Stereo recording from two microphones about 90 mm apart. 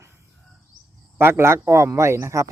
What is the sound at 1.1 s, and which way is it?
Speech, 30° right (ahead or behind).